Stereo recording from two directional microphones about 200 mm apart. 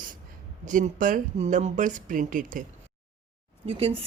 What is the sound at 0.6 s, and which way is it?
Speech, 40° right (ahead or behind).